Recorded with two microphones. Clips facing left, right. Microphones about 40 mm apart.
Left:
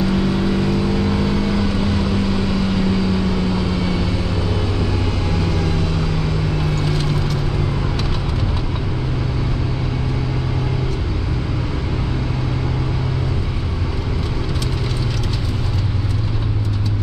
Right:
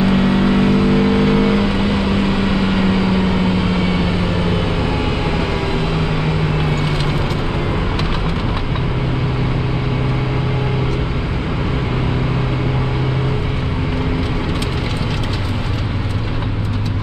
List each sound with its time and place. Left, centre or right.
0.0 s vehicle: right
5.7 s vehicle: right